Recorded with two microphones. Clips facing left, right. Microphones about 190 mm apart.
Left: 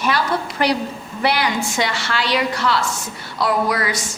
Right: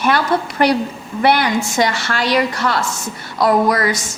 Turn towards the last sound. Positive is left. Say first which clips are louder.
# right 5 dB
turn(degrees=-45)  # may be behind; listen again after turning